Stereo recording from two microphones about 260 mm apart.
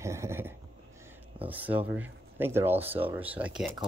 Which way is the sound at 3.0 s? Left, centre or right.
Centre.